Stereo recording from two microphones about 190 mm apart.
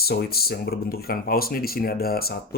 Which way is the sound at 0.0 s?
55° left (ahead or behind).